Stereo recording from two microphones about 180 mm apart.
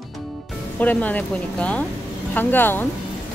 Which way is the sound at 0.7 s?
10° left (ahead or behind).